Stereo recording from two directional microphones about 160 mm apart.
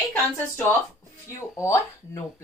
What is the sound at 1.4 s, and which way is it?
Speech, 20° left (ahead or behind).